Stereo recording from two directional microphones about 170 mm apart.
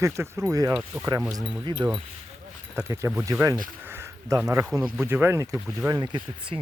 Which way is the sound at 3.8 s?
15° right (ahead or behind).